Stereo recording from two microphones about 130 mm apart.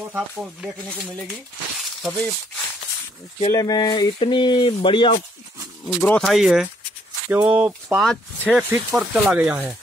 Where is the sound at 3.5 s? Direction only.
30° left (ahead or behind).